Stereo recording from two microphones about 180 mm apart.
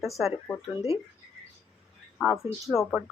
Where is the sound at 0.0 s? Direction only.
Centre (ahead or behind).